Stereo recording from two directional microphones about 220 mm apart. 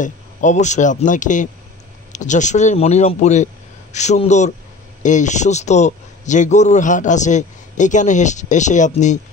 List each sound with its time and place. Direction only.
0.0 s a man's voice: 35° left (ahead or behind)